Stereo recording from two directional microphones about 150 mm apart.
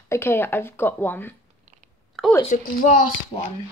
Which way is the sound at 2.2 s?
Centre (ahead or behind).